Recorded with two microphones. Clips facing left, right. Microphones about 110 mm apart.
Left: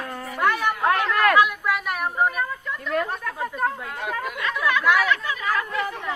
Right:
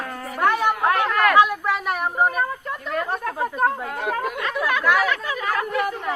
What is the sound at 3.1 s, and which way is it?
Chatter, 40° right (ahead or behind).